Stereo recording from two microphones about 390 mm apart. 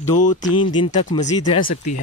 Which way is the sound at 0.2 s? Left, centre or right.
Centre.